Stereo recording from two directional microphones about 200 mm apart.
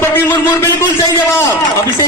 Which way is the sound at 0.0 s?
10° left (ahead or behind).